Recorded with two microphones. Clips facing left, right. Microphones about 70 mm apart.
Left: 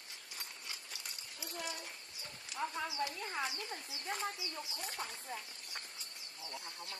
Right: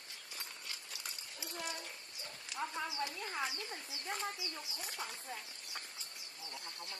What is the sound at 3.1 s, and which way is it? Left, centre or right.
Speech, centre.